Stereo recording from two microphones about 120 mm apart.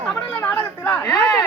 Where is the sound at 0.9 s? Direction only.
30° left (ahead or behind).